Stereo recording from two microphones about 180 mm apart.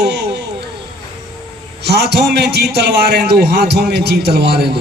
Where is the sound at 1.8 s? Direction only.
65° right (ahead or behind).